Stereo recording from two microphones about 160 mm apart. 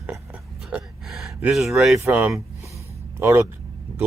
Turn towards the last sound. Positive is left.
turn(degrees=-15)  # may be behind; listen again after turning